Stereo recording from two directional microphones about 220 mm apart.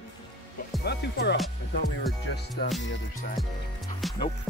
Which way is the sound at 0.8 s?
50° left (ahead or behind).